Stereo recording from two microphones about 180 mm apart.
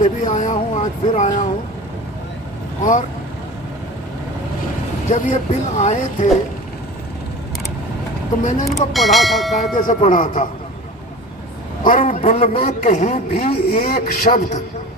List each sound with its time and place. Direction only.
0.0 s a man's voice: 40° left (ahead or behind)
5.0 s a man's voice: 40° left (ahead or behind)
8.6 s speech: centre (ahead or behind)
9.7 s speech: 45° left (ahead or behind)
11.8 s a man's voice: 45° left (ahead or behind)
13.4 s speech: 55° left (ahead or behind)